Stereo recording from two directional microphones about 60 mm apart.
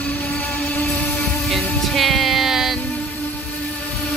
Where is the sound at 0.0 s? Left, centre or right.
Left.